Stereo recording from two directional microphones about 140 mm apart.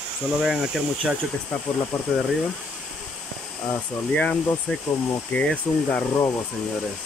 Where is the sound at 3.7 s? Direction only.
10° left (ahead or behind).